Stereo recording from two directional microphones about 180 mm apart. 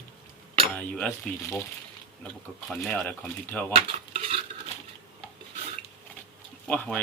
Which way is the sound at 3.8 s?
35° right (ahead or behind).